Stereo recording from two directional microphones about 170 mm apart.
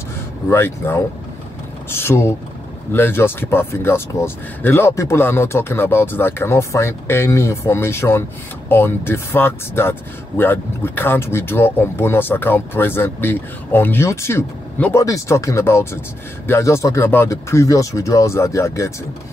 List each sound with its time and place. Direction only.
0.5 s speech: 15° left (ahead or behind)